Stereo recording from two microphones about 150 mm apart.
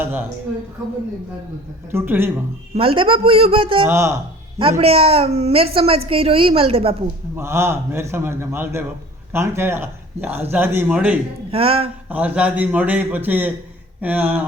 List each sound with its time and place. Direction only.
0.0 s speech: 15° right (ahead or behind)
1.9 s speech: 15° right (ahead or behind)
2.7 s a woman's voice: 35° right (ahead or behind)
3.8 s speech: 20° right (ahead or behind)
4.8 s a woman's voice: 40° right (ahead or behind)
7.3 s speech: 15° right (ahead or behind)
11.5 s a woman's voice: 40° right (ahead or behind)
12.0 s speech: 10° right (ahead or behind)